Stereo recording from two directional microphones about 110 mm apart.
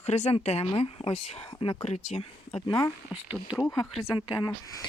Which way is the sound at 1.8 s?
75° left (ahead or behind).